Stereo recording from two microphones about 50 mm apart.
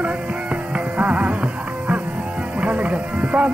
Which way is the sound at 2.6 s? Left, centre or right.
Right.